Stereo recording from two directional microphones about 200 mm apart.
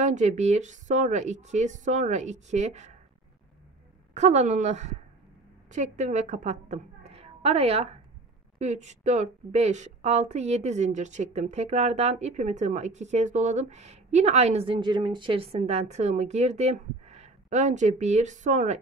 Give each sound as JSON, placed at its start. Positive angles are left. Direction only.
{"t": 0.0, "sound": "a woman's voice", "side_deg": -35}
{"t": 4.1, "sound": "a woman's voice", "side_deg": -35}